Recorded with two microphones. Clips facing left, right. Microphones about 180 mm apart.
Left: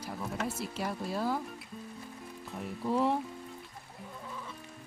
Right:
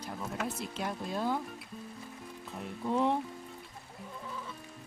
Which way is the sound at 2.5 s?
Centre (ahead or behind).